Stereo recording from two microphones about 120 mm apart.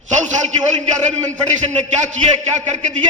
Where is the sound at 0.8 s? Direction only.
85° right.